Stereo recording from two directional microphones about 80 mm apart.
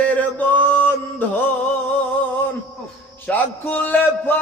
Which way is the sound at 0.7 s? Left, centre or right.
Left.